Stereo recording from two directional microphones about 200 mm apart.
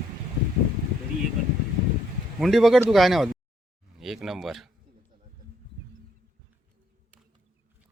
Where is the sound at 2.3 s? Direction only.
Centre (ahead or behind).